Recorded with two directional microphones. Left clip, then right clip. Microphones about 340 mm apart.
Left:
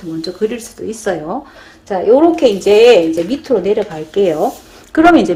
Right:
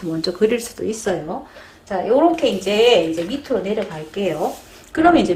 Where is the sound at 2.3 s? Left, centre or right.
Left.